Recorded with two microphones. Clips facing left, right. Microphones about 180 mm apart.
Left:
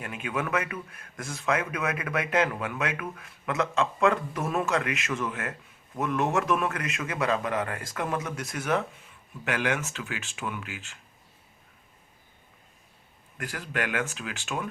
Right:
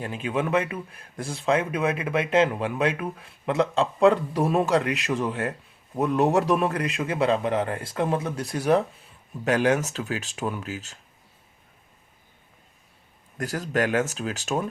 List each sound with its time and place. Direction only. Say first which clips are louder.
0.0 s speech: right 5 dB; 30° right (ahead or behind)
13.3 s speech: right 7 dB; 40° right (ahead or behind)